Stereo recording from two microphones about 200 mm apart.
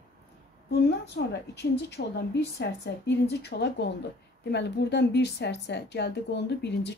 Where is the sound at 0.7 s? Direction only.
55° left (ahead or behind).